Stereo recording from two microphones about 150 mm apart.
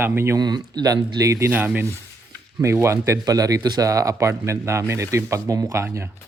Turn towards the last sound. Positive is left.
turn(degrees=-20)  # may be behind; listen again after turning